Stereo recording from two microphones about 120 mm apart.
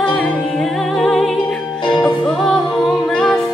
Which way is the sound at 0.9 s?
Centre (ahead or behind).